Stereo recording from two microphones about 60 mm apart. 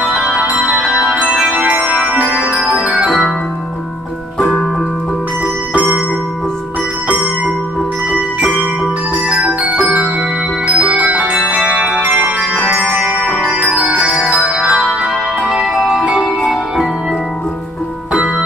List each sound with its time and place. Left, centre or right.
0.4 s music: right
1.0 s organ: centre
1.9 s music: right
2.2 s glockenspiel: right
2.8 s music: right
4.4 s music: left
8.1 s glockenspiel: centre
11.4 s music: centre
15.6 s music: centre